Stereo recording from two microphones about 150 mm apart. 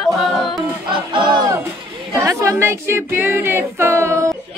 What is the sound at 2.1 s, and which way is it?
Speech, 20° right (ahead or behind).